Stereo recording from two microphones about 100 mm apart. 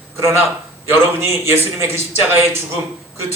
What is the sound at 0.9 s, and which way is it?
A man's voice, 25° right (ahead or behind).